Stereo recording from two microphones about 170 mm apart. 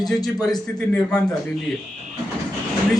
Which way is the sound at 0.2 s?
25° left (ahead or behind).